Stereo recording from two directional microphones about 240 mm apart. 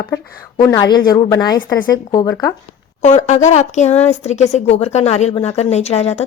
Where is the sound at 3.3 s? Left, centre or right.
Left.